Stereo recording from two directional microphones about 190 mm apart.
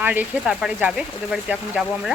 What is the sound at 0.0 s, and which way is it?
Speech, 10° right (ahead or behind).